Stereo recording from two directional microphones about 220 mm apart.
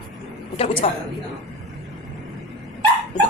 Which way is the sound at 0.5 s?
25° left (ahead or behind).